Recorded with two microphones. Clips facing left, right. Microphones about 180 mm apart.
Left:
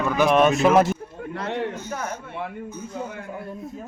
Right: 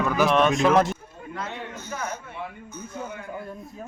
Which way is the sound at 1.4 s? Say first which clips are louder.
Left 7 dB; 70° left (ahead or behind).